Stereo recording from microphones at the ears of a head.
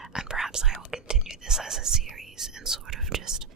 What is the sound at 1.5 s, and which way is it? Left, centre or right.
Whispering, right.